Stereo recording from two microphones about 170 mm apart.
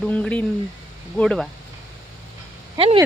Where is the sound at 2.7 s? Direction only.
35° right (ahead or behind).